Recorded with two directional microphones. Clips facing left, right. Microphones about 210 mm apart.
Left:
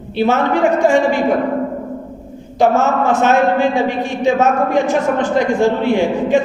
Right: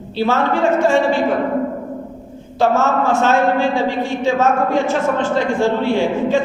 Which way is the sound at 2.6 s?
15° left (ahead or behind).